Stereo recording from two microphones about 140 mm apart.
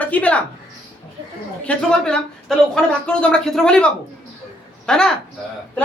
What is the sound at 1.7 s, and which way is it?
Speech, 5° left (ahead or behind).